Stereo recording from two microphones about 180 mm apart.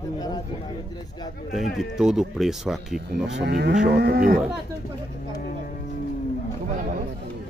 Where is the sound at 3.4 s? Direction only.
65° right (ahead or behind).